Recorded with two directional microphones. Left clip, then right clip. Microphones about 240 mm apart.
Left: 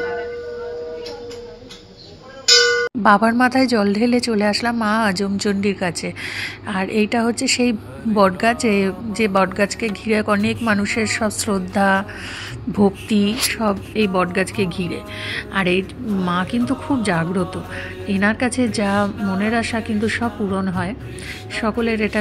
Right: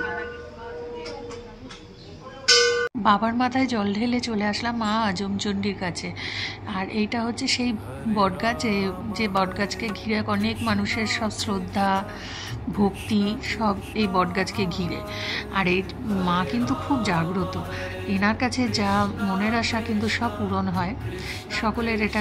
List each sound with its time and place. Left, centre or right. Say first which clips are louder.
3.0 s speech: left 8 dB; left